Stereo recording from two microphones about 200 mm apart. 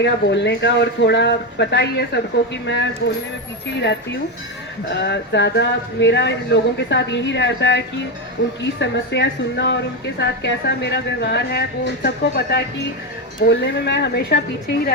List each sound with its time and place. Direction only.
0.0 s speech: 60° left (ahead or behind)
4.9 s a woman's voice: 55° left (ahead or behind)